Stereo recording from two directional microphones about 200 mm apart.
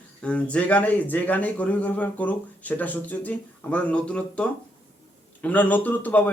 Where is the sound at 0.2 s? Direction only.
5° left (ahead or behind).